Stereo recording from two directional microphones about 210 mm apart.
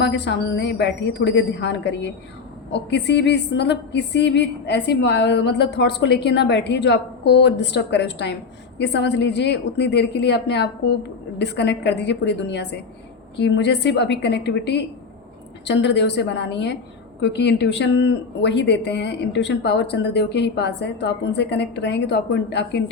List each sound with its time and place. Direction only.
0.0 s a woman's voice: 55° left (ahead or behind)